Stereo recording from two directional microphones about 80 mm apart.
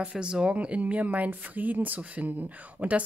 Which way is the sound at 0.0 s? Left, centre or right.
Centre.